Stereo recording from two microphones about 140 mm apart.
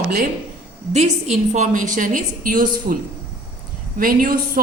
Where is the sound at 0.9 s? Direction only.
55° right (ahead or behind); by 3.0 s 75° right (ahead or behind).